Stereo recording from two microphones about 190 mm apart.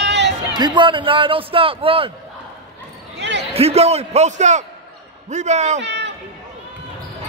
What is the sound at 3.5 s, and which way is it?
A man's voice, 30° right (ahead or behind).